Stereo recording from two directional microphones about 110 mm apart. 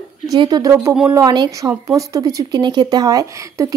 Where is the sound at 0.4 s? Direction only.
35° right (ahead or behind).